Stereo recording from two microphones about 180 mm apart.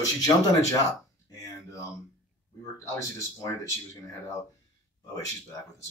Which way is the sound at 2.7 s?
15° left (ahead or behind).